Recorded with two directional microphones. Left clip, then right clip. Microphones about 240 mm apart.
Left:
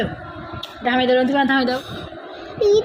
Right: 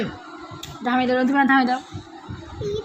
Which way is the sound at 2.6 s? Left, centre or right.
Centre.